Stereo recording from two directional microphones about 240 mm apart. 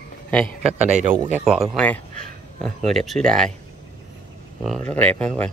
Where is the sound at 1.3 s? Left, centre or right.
Centre.